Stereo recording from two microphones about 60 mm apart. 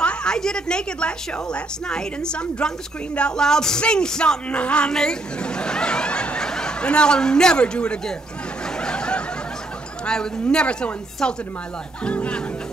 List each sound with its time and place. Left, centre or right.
0.0 s music: centre
8.7 s snicker: centre
10.0 s music: centre